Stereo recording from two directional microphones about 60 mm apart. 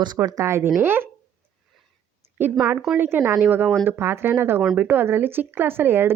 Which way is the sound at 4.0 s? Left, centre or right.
Right.